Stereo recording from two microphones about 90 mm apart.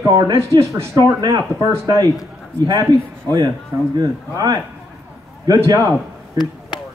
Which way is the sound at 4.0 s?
45° right (ahead or behind).